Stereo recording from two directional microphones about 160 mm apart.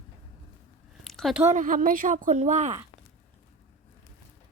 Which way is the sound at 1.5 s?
55° right (ahead or behind).